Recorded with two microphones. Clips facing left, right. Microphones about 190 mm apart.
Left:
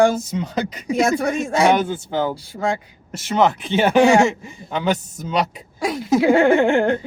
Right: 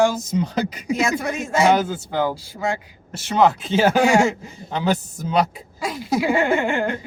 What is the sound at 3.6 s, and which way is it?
Speech, 65° left (ahead or behind).